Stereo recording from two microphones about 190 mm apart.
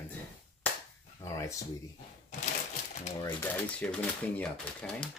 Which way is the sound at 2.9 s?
35° left (ahead or behind).